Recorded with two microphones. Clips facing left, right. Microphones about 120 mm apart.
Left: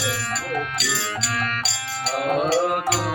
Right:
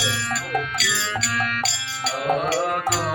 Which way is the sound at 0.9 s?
40° left (ahead or behind).